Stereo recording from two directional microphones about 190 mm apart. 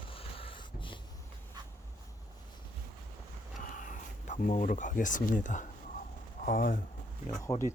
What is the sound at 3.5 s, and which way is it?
Speech, 45° left (ahead or behind).